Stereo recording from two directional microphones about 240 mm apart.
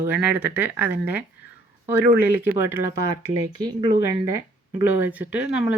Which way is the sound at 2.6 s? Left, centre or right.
Centre.